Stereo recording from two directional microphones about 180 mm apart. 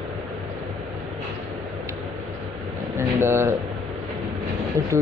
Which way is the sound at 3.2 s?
15° right (ahead or behind).